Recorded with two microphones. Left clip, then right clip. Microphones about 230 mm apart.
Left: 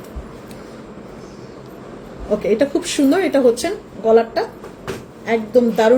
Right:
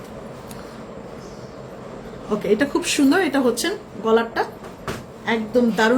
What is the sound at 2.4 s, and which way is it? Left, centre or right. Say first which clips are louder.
Speech: left 2 dB; centre.